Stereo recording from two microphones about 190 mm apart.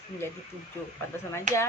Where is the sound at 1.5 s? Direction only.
40° right (ahead or behind).